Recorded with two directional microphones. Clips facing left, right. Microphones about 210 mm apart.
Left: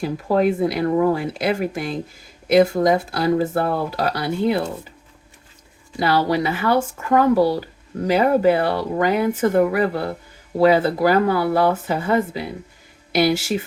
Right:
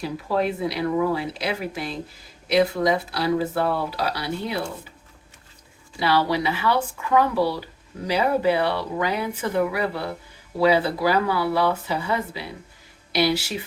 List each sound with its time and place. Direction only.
0.0 s speech: 50° left (ahead or behind)
6.0 s speech: 45° left (ahead or behind)